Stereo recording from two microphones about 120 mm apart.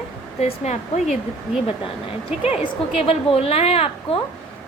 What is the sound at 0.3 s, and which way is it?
Speech, 65° left (ahead or behind).